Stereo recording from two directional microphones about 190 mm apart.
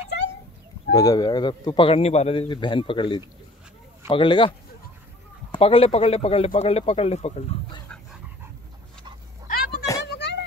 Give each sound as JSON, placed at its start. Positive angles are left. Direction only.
{"t": 0.9, "sound": "a man's voice", "side_deg": 20}
{"t": 5.5, "sound": "speech", "side_deg": 30}
{"t": 9.5, "sound": "a sound", "side_deg": 55}